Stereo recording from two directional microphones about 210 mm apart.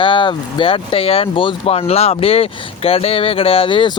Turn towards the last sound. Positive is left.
turn(degrees=25)  # may be behind; listen again after turning